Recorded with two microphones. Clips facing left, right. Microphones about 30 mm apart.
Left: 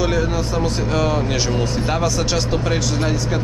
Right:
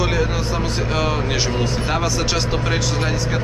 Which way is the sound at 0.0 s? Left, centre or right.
Centre.